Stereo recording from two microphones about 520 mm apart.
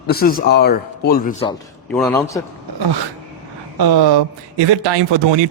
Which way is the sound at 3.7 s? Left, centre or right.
Right.